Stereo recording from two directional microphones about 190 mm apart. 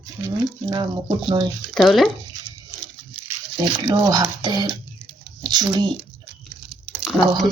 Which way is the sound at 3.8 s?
20° right (ahead or behind).